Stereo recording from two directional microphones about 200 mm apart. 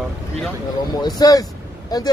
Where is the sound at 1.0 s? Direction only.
20° left (ahead or behind).